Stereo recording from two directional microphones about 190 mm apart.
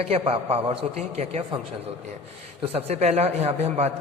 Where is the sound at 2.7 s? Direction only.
35° right (ahead or behind).